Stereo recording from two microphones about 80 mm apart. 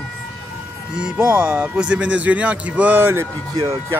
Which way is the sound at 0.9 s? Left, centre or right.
Centre.